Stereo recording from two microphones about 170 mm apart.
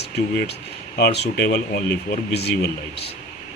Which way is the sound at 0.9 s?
70° left (ahead or behind).